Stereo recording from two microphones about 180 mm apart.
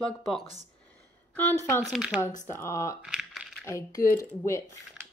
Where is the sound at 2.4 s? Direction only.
15° left (ahead or behind).